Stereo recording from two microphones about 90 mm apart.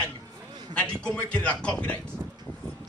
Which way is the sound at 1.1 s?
15° left (ahead or behind).